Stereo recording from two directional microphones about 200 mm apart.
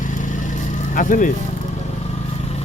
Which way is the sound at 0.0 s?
40° left (ahead or behind).